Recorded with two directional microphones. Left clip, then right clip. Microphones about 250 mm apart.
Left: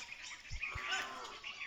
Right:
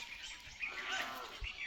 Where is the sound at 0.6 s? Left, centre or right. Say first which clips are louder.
Even; left.